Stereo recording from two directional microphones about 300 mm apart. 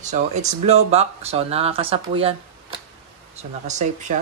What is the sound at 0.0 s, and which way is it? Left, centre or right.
Speech, right.